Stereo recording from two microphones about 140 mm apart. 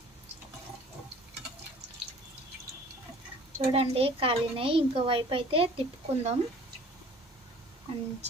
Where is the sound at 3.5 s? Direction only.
45° right (ahead or behind).